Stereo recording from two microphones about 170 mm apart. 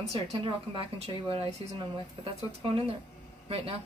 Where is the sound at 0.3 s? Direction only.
30° right (ahead or behind).